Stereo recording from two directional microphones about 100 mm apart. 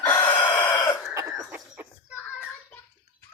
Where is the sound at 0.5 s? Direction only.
25° left (ahead or behind).